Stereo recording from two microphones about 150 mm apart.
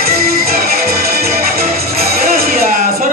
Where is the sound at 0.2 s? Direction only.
90° right.